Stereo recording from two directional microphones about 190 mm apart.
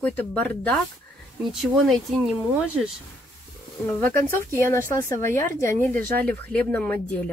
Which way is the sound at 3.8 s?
10° left (ahead or behind).